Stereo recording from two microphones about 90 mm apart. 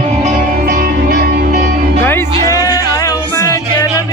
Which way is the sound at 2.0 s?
25° left (ahead or behind).